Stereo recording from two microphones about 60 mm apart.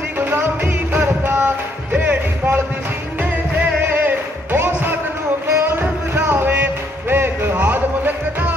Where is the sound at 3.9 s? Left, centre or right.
Right.